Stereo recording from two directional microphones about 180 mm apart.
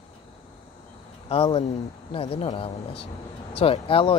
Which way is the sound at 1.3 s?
30° left (ahead or behind).